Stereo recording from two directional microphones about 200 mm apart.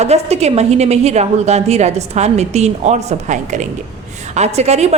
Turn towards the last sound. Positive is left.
turn(degrees=-35)  # may be behind; listen again after turning